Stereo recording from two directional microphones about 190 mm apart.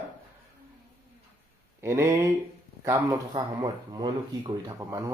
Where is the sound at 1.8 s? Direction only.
15° right (ahead or behind).